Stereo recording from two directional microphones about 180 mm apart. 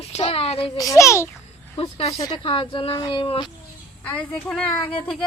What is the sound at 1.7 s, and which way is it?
A woman's voice, 35° left (ahead or behind).